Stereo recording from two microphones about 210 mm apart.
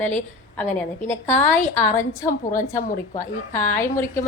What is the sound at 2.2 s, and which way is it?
Speech, 40° left (ahead or behind).